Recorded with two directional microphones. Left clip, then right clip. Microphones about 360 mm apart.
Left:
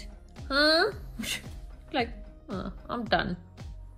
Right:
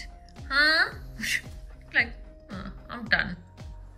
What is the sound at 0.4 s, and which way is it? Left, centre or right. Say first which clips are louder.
Music: right 1 dB; centre.